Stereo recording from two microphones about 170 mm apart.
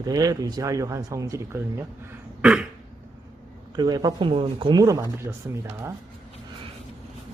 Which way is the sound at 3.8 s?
25° right (ahead or behind).